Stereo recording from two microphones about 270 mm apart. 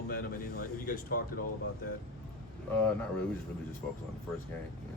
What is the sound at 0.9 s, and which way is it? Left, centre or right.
Speech, left.